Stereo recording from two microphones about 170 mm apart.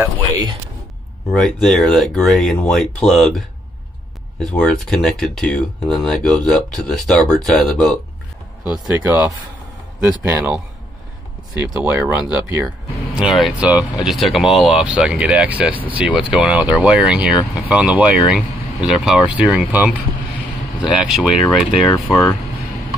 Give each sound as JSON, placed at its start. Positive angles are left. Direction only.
{"t": 0.0, "sound": "speech", "side_deg": -20}
{"t": 1.3, "sound": "speech", "side_deg": 5}
{"t": 8.6, "sound": "speech", "side_deg": -15}
{"t": 11.5, "sound": "speech", "side_deg": -15}
{"t": 13.1, "sound": "speech", "side_deg": 0}
{"t": 21.9, "sound": "speech", "side_deg": 20}